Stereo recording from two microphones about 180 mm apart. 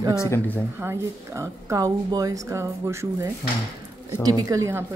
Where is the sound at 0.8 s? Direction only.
15° right (ahead or behind).